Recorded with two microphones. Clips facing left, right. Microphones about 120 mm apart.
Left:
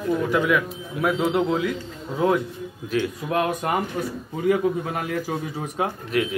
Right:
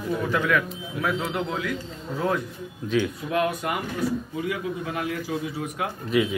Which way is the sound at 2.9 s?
5° left (ahead or behind).